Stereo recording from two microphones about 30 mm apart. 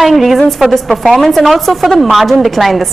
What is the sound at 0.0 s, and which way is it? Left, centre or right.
A man's voice, centre.